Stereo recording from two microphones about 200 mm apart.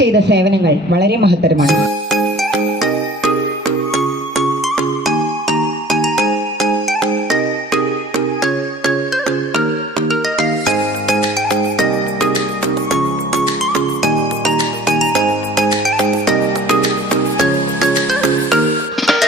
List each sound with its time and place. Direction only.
0.0 s a woman's voice: 60° right (ahead or behind)
5.0 s music: centre (ahead or behind)